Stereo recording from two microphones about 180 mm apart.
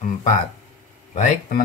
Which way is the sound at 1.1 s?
40° left (ahead or behind).